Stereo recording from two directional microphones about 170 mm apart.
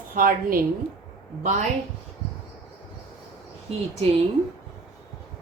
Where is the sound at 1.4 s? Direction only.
45° right (ahead or behind).